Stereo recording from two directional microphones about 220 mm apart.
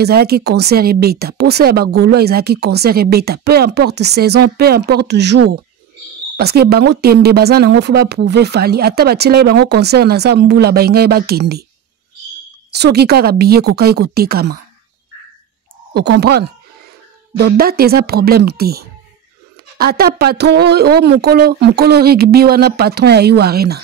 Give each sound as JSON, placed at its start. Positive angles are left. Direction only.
{"t": 0.0, "sound": "speech", "side_deg": -45}
{"t": 12.7, "sound": "speech", "side_deg": -45}
{"t": 15.9, "sound": "speech", "side_deg": -50}